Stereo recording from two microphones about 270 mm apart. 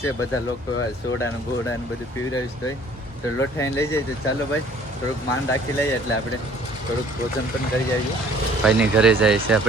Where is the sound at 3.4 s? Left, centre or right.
Centre.